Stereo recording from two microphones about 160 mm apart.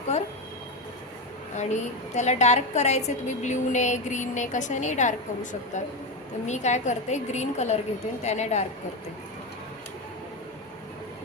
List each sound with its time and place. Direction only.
1.5 s a woman's voice: 45° left (ahead or behind)